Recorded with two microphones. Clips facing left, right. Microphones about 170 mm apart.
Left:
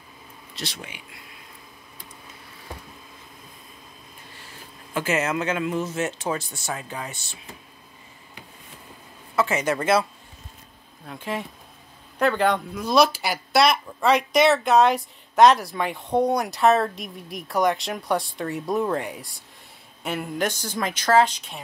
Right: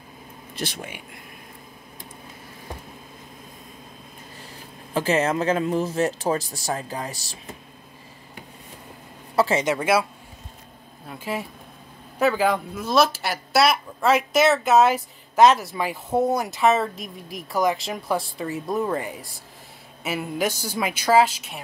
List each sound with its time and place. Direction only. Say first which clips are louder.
0.6 s speech: right 4 dB; 50° right (ahead or behind)
4.9 s speech: right 3 dB; 35° right (ahead or behind)
9.3 s a sound: right 3 dB; 30° right (ahead or behind)
9.7 s speech: even; 10° right (ahead or behind)
11.1 s speech: right 1 dB; 5° right (ahead or behind)